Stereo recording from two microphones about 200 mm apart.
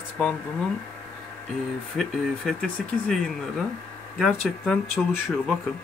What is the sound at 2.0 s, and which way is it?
Speech, centre (ahead or behind).